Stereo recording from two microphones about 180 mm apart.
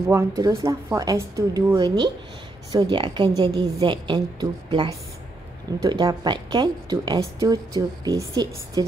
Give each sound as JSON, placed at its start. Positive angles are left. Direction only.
{"t": 0.1, "sound": "a woman's voice", "side_deg": -20}